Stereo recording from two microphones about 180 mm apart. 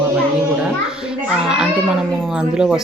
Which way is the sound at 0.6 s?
5° right (ahead or behind).